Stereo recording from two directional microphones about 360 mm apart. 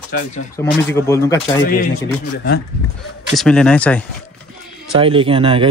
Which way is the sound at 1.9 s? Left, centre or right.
Left.